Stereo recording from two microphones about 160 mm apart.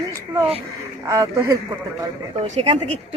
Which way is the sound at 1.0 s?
20° right (ahead or behind).